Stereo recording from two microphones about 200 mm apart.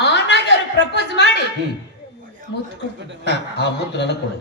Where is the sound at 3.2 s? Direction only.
60° left (ahead or behind).